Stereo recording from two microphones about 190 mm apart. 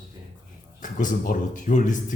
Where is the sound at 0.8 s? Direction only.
45° left (ahead or behind).